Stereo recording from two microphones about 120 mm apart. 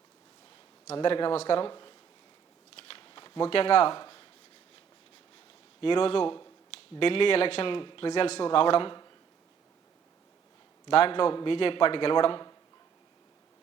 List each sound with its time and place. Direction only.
1.0 s a man's voice: 45° left (ahead or behind)
2.7 s shuffling cards: 50° left (ahead or behind)
5.8 s a man's voice: 45° left (ahead or behind)
10.8 s a man's voice: 50° left (ahead or behind)